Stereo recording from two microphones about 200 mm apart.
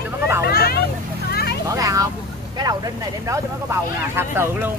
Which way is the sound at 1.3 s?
50° left (ahead or behind).